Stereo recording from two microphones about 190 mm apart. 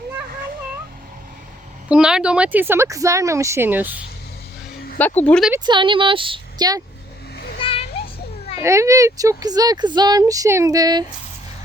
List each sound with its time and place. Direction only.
1.9 s speech: 5° right (ahead or behind)
4.9 s speech: 10° left (ahead or behind)
5.5 s speech: 25° right (ahead or behind)
7.6 s children playing: 30° left (ahead or behind)
8.6 s speech: 15° right (ahead or behind)